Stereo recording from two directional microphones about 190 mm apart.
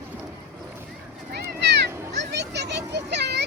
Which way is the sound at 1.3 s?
60° right (ahead or behind).